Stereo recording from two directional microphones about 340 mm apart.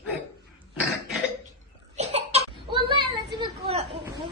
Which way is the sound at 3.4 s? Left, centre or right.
Centre.